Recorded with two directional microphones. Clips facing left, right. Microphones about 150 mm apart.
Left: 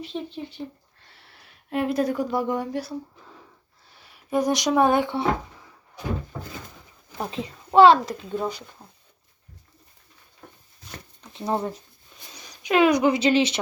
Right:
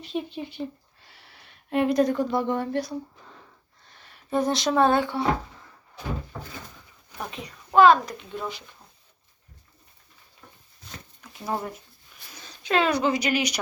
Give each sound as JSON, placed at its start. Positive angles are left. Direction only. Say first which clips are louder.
{"t": 0.0, "sound": "speech", "louder": "right 1 dB", "side_deg": -10}
{"t": 1.0, "sound": "a sound", "louder": "even", "side_deg": 0}
{"t": 3.8, "sound": "speech", "louder": "even", "side_deg": 10}
{"t": 7.2, "sound": "a child's voice", "louder": "left 5 dB", "side_deg": 30}
{"t": 8.4, "sound": "speech", "louder": "left 5 dB", "side_deg": 40}
{"t": 11.2, "sound": "speech", "louder": "left 4 dB", "side_deg": 25}
{"t": 12.3, "sound": "a sound", "louder": "left 2 dB", "side_deg": 15}
{"t": 13.1, "sound": "speech", "louder": "left 5 dB", "side_deg": 25}